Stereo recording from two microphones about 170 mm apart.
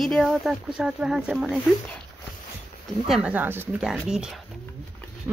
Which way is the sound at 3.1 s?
5° right (ahead or behind).